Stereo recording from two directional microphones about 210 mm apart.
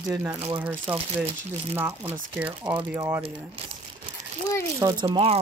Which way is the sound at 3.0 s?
20° right (ahead or behind).